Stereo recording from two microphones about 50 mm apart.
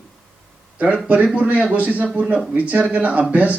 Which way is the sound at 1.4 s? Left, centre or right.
Right.